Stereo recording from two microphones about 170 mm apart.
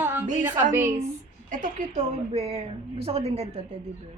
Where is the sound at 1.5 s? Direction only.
45° right (ahead or behind).